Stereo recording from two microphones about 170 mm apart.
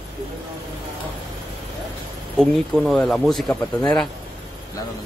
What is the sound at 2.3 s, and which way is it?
Speech, centre (ahead or behind).